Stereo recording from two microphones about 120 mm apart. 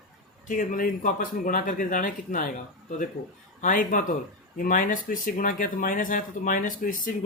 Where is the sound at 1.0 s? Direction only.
90° left.